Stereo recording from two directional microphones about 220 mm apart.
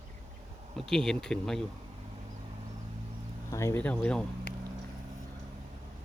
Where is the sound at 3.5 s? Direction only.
10° left (ahead or behind).